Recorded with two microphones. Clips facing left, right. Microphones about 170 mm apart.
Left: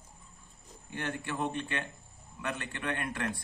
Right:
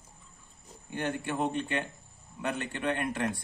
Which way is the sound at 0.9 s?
25° right (ahead or behind).